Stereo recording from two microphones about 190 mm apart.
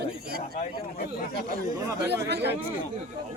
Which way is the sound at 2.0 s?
60° right (ahead or behind).